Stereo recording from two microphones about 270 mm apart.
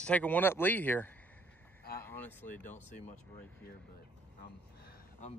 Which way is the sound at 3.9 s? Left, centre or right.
Left.